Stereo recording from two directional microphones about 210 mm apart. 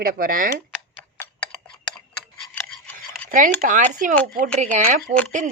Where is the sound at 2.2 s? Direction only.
5° left (ahead or behind).